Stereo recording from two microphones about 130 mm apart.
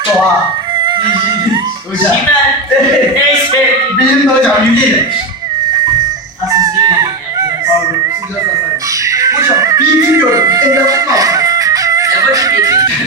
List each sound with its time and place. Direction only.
0.9 s music: 35° right (ahead or behind)
6.5 s fowl: 25° right (ahead or behind)
9.0 s music: 25° right (ahead or behind)